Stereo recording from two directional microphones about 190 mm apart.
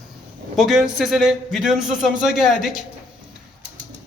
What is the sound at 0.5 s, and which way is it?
A man's voice, centre (ahead or behind).